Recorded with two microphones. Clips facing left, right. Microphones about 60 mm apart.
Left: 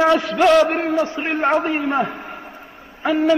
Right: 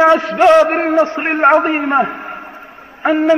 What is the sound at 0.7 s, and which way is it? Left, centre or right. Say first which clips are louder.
A man's voice: right 6 dB; right.